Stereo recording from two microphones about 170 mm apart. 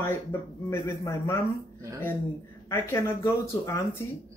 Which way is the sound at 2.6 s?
15° left (ahead or behind).